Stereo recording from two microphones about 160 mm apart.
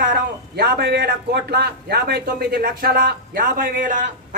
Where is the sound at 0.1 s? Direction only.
75° right (ahead or behind).